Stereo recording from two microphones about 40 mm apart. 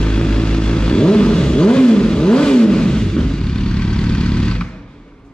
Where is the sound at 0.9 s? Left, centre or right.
Left.